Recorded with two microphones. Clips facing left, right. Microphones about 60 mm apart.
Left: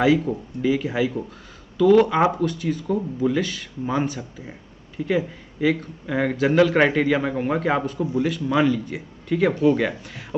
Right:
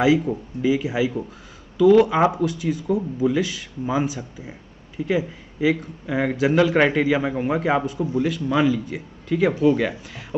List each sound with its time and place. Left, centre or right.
0.0 s speech: centre